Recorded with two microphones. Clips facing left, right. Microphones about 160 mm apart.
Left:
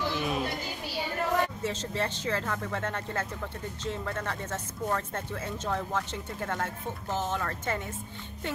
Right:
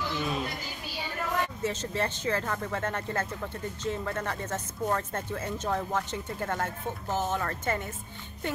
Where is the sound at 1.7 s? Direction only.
5° right (ahead or behind).